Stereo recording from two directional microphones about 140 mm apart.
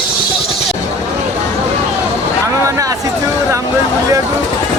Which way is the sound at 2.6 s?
20° right (ahead or behind).